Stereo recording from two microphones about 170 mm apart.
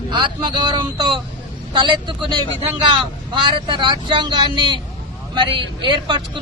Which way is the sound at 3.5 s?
25° right (ahead or behind).